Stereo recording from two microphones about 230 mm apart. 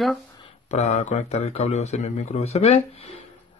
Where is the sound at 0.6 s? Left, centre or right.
Left.